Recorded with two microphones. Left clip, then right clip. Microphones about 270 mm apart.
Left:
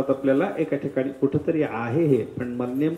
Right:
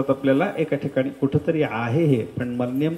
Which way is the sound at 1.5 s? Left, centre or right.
Right.